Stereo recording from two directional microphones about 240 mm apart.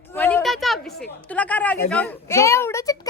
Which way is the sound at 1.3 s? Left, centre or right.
Centre.